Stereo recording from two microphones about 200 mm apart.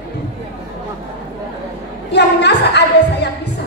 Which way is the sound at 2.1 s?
60° left (ahead or behind).